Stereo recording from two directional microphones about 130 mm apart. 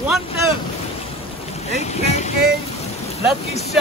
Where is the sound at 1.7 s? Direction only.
60° left (ahead or behind).